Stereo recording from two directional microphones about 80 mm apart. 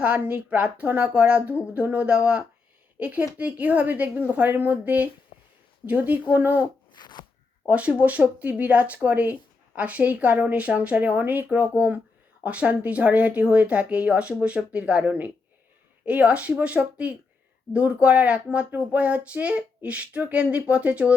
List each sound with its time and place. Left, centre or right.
0.0 s speech: centre
6.9 s a sound: left
7.7 s speech: centre